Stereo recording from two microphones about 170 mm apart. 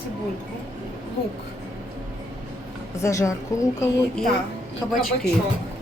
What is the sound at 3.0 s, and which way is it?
Speech, 15° left (ahead or behind).